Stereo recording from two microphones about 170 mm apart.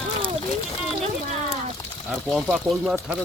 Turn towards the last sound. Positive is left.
turn(degrees=-5)  # may be behind; listen again after turning